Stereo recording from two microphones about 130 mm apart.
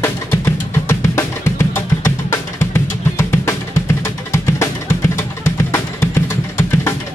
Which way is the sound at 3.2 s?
20° left (ahead or behind).